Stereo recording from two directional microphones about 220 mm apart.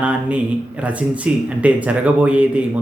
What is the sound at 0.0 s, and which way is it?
Speech, 5° right (ahead or behind).